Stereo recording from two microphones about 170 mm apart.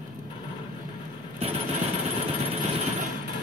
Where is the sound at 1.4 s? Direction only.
35° right (ahead or behind).